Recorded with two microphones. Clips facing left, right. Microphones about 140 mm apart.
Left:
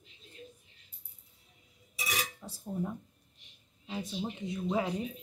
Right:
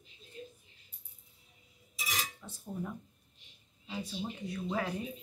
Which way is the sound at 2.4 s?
30° left (ahead or behind).